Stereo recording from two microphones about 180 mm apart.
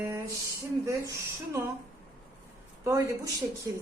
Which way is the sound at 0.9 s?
15° right (ahead or behind).